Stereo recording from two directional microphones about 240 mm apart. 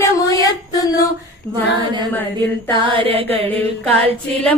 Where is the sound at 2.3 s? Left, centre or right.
Centre.